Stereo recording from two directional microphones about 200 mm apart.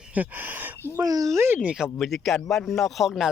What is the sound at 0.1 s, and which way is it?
Speech, 10° right (ahead or behind).